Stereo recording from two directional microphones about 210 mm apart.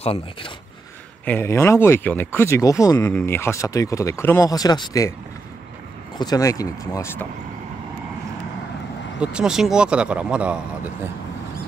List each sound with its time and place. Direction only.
0.0 s speech: 25° left (ahead or behind)
1.2 s speech: 10° left (ahead or behind)
6.1 s speech: 20° left (ahead or behind)
9.2 s speech: 5° right (ahead or behind)